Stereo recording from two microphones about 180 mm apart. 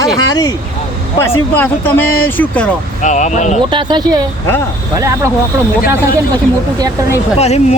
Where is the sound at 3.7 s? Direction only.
25° right (ahead or behind).